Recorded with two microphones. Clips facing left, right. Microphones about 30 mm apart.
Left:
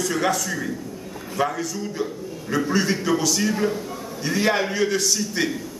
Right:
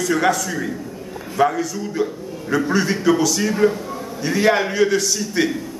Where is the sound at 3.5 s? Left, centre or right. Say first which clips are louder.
Right 6 dB; centre.